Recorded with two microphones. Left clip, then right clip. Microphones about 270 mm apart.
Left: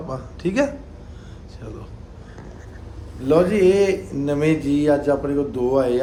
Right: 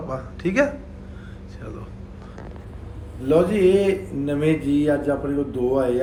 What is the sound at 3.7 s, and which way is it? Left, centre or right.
Speech, left.